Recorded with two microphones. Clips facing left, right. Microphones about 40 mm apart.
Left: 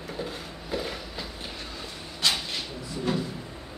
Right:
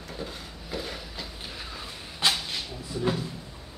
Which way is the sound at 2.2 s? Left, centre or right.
Right.